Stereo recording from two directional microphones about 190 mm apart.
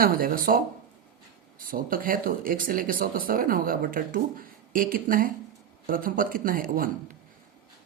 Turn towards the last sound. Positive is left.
turn(degrees=-50)  # may be behind; listen again after turning